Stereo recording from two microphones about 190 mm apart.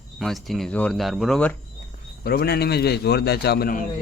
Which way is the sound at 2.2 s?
55° left (ahead or behind).